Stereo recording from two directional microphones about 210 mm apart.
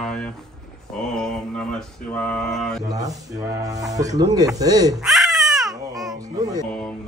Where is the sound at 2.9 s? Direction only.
15° right (ahead or behind).